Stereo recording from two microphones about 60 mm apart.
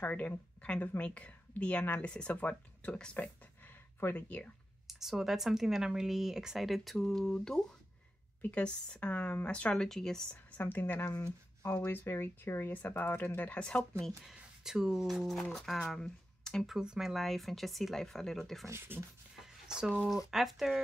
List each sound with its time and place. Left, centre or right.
0.0 s speech: left
4.0 s speech: left
4.8 s speech: centre
10.3 s a woman's voice: left; by 14.1 s centre
14.2 s speech: centre
16.0 s a sound: centre
16.6 s speech: centre
17.1 s speech: centre
18.7 s speech: right
19.4 s a sound: centre
20.0 s speech: centre